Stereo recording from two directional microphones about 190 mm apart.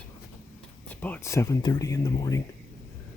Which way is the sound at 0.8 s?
10° left (ahead or behind).